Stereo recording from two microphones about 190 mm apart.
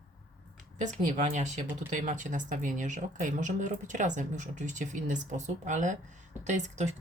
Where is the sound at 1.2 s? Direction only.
40° right (ahead or behind).